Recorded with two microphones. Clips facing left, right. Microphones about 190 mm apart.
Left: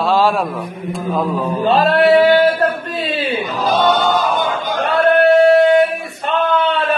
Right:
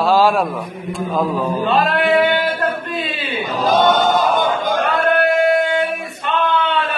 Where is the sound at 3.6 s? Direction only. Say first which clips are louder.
Right 1 dB; 45° right (ahead or behind).